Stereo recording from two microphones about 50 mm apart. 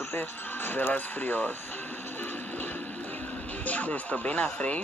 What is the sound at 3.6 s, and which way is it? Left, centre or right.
Speech, left.